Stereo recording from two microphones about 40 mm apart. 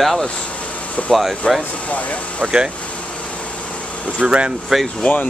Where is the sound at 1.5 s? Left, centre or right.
Centre.